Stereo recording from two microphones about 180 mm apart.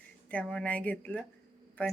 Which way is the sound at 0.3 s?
5° left (ahead or behind).